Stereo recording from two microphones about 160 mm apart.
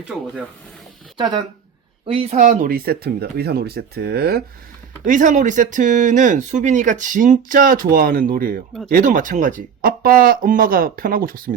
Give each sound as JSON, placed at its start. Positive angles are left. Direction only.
{"t": 1.1, "sound": "speech", "side_deg": -30}
{"t": 2.4, "sound": "speech", "side_deg": -55}
{"t": 5.0, "sound": "speech", "side_deg": -55}